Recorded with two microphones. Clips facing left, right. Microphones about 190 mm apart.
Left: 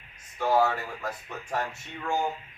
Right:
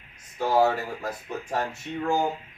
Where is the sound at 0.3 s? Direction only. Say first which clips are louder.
Right 2 dB; 35° right (ahead or behind).